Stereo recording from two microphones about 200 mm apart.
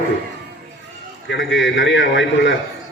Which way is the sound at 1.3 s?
65° left (ahead or behind).